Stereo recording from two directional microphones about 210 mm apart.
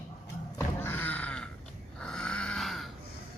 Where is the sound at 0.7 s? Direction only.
10° left (ahead or behind).